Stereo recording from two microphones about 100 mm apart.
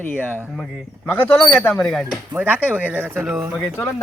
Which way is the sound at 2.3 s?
15° right (ahead or behind).